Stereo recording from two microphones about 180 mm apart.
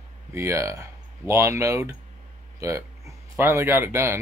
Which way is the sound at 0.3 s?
15° right (ahead or behind).